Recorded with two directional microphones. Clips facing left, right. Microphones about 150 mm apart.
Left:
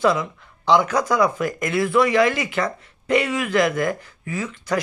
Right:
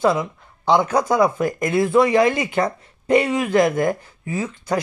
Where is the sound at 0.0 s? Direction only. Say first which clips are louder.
Right 1 dB; 25° right (ahead or behind).